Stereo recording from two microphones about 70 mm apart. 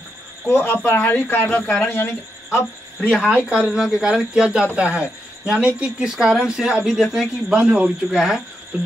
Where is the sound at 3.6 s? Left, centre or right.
Centre.